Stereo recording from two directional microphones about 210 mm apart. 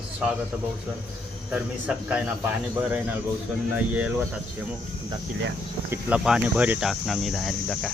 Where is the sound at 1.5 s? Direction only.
5° right (ahead or behind).